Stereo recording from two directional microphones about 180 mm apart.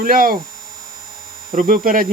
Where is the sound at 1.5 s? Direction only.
50° right (ahead or behind).